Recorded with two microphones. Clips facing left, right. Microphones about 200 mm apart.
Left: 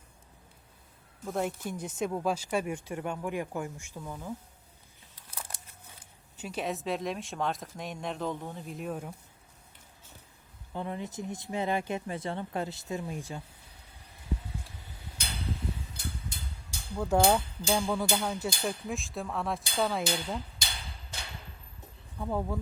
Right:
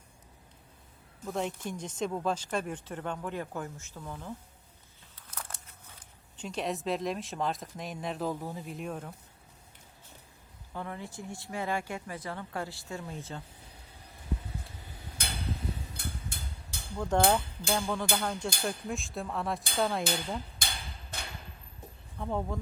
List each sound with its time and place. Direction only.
1.2 s speech: 5° left (ahead or behind)
6.3 s speech: 5° left (ahead or behind)
10.8 s speech: 20° left (ahead or behind)
15.2 s a sound: 55° right (ahead or behind)
17.1 s speech: 10° left (ahead or behind)
20.6 s a sound: 55° right (ahead or behind)
22.2 s speech: centre (ahead or behind)